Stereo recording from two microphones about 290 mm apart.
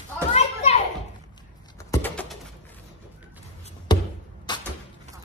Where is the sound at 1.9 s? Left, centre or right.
Centre.